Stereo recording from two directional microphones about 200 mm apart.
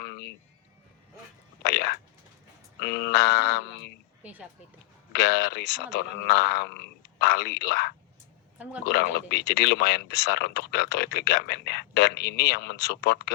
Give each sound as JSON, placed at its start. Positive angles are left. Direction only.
{"t": 0.0, "sound": "a sound", "side_deg": 55}
{"t": 1.6, "sound": "a sound", "side_deg": 55}
{"t": 4.2, "sound": "speech", "side_deg": -10}
{"t": 5.1, "sound": "speech", "side_deg": 55}
{"t": 8.5, "sound": "a woman's voice", "side_deg": -5}
{"t": 8.8, "sound": "speech", "side_deg": 55}